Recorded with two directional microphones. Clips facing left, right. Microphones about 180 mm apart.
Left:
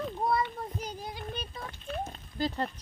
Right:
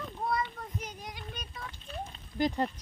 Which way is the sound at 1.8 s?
50° left (ahead or behind).